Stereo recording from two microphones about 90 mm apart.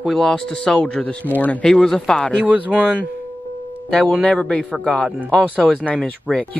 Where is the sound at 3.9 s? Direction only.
5° left (ahead or behind).